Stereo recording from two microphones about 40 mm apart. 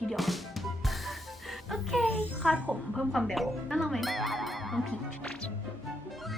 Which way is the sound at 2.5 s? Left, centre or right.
Right.